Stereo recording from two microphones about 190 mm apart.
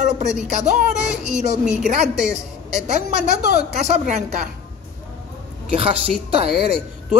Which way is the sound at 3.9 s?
40° right (ahead or behind).